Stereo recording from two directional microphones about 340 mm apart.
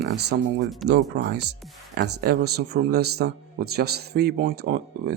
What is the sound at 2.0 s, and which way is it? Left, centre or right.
A man's voice, right.